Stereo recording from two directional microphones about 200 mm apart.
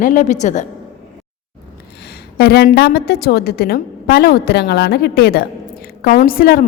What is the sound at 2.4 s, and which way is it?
A woman's voice, 50° left (ahead or behind).